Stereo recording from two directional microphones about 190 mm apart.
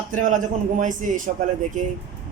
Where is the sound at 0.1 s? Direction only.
45° right (ahead or behind).